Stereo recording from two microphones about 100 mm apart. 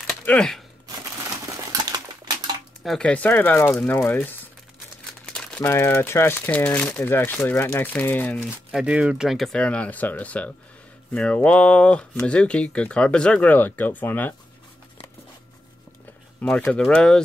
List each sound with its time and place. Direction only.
0.4 s speech: 5° left (ahead or behind)
1.4 s a sound: 40° right (ahead or behind)
2.8 s speech: centre (ahead or behind)
3.1 s speech: 15° left (ahead or behind)
5.2 s crumpling: 10° left (ahead or behind)
5.6 s speech: 25° left (ahead or behind)
8.8 s speech: 10° right (ahead or behind)
9.6 s speech: 15° left (ahead or behind)
16.3 s speech: 15° left (ahead or behind)